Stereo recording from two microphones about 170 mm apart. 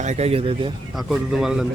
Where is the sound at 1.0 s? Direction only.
Centre (ahead or behind).